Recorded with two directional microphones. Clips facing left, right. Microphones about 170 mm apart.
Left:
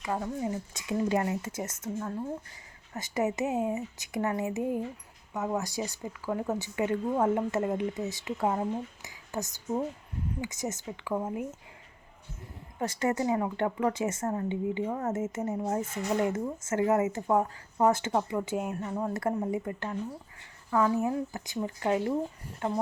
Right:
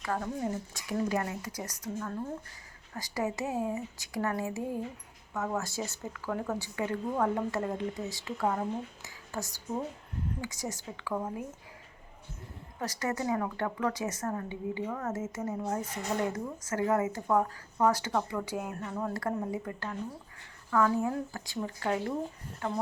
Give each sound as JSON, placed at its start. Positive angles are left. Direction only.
{"t": 0.0, "sound": "speech", "side_deg": 10}
{"t": 0.7, "sound": "speech", "side_deg": 20}
{"t": 12.8, "sound": "speech", "side_deg": 25}